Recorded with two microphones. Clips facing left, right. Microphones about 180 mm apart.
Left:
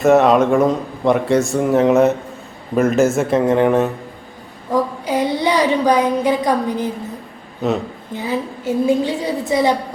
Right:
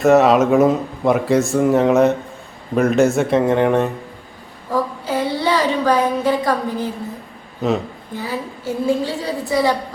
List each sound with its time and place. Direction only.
0.0 s speech: centre (ahead or behind)
4.7 s speech: 15° left (ahead or behind)
7.6 s speech: centre (ahead or behind)
8.2 s a woman's voice: 20° left (ahead or behind)